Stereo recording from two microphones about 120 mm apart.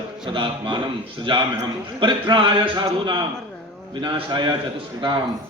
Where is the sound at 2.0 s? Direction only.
40° right (ahead or behind).